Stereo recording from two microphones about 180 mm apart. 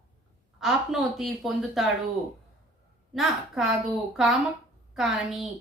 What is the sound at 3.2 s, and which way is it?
Speech, centre (ahead or behind).